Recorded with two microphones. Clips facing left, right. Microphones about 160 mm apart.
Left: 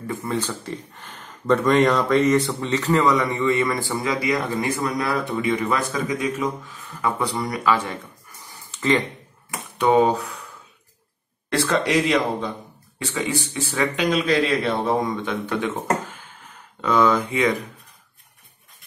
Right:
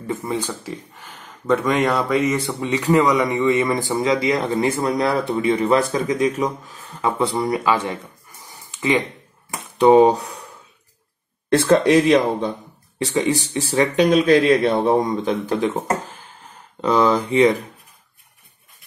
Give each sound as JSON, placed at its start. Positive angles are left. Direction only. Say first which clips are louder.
{"t": 0.0, "sound": "speech", "louder": "right 2 dB", "side_deg": -20}
{"t": 8.5, "sound": "a sound", "louder": "even", "side_deg": -15}
{"t": 9.8, "sound": "speech", "louder": "right 5 dB", "side_deg": -30}
{"t": 11.5, "sound": "speech", "louder": "right 6 dB", "side_deg": -45}
{"t": 13.0, "sound": "speech", "louder": "right 6 dB", "side_deg": -35}